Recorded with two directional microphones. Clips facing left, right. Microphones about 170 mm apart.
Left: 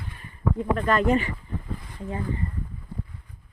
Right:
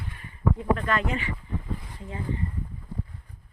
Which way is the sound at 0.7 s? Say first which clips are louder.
Left 6 dB; 40° left (ahead or behind).